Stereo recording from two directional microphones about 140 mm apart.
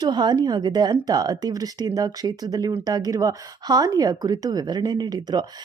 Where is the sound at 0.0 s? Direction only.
30° right (ahead or behind).